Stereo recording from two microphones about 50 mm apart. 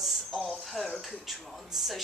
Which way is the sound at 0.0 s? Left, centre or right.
Centre.